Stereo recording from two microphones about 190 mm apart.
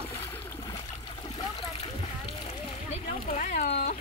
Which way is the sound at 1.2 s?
30° left (ahead or behind).